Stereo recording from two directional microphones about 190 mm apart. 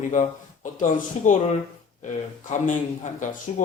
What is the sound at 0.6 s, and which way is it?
Speech, 45° left (ahead or behind).